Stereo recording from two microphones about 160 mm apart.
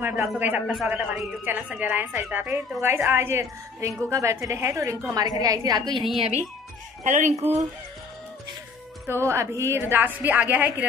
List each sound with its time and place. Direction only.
0.0 s a woman's voice: 15° right (ahead or behind)
7.0 s a woman's voice: 50° right (ahead or behind)
9.0 s a woman's voice: 15° right (ahead or behind)